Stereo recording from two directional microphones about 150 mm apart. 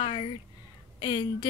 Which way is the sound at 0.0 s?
35° left (ahead or behind).